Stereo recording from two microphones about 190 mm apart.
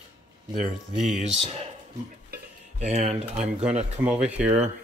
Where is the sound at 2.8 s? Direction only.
35° right (ahead or behind).